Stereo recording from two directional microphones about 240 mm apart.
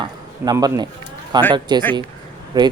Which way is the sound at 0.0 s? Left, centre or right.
Centre.